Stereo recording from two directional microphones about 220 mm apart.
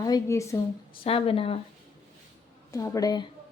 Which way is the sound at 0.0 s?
15° left (ahead or behind).